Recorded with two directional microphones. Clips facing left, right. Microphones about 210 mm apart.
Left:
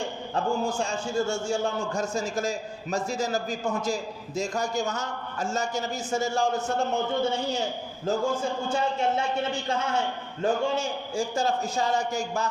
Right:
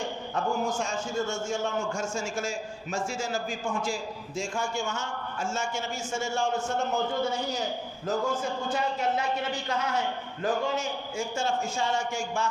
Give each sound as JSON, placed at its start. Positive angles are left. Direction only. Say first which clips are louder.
{"t": 0.3, "sound": "a man's voice", "louder": "left 2 dB", "side_deg": 30}